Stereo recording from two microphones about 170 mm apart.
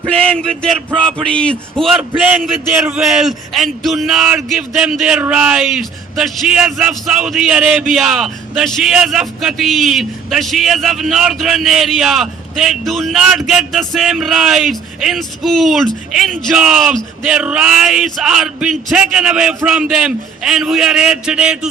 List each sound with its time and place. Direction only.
0.0 s speech: 5° left (ahead or behind)